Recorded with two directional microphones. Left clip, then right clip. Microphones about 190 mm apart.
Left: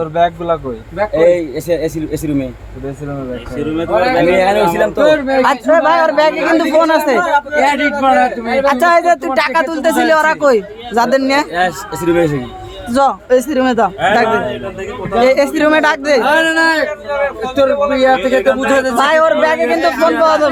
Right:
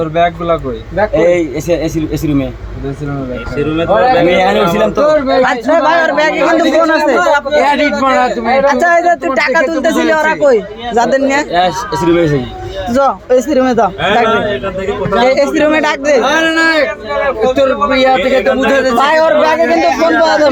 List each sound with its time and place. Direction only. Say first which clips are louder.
0.0 s a man's voice: right 2 dB; 30° left (ahead or behind)
1.1 s speech: left 1 dB; 15° left (ahead or behind)
4.2 s a man's voice: right 1 dB; 15° left (ahead or behind)
7.5 s speech: right 3 dB; 10° left (ahead or behind)
8.6 s speech: left 1 dB; 25° left (ahead or behind)
19.9 s speech: right 2 dB; 30° left (ahead or behind)